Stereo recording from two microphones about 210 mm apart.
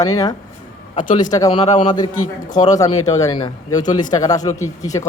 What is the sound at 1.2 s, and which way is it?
Speech, 15° left (ahead or behind).